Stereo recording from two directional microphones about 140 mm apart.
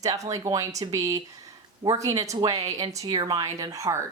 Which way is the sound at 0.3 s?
25° right (ahead or behind).